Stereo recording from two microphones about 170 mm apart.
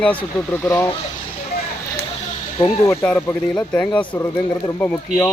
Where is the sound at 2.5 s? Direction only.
20° left (ahead or behind).